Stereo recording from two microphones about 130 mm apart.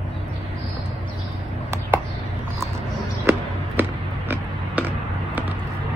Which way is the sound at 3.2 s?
15° right (ahead or behind).